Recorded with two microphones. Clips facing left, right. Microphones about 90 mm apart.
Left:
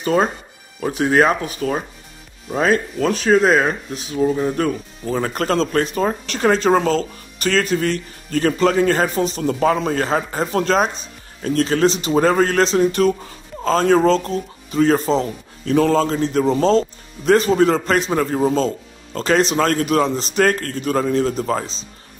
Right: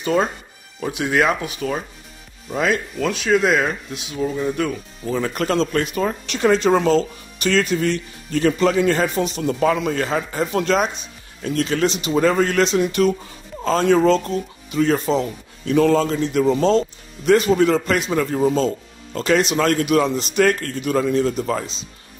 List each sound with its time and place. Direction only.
0.0 s speech: 40° left (ahead or behind)